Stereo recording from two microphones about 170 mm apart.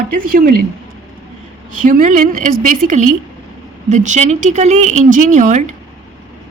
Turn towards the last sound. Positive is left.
turn(degrees=-45)  # may be behind; listen again after turning